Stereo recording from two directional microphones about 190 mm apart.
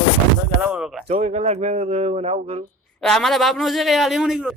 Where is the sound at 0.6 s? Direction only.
5° right (ahead or behind).